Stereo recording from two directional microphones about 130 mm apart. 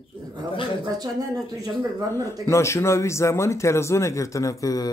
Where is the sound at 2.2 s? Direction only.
20° left (ahead or behind).